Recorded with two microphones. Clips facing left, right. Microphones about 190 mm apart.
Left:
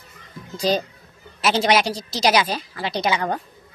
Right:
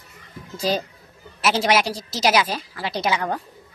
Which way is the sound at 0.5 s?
5° right (ahead or behind).